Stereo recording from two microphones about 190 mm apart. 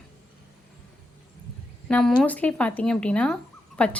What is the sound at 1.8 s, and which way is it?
A woman's voice, 5° left (ahead or behind).